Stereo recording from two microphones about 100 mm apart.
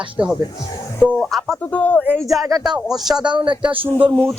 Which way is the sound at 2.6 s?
5° right (ahead or behind).